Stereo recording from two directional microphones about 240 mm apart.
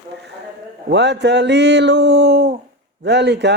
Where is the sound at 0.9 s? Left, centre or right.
Right.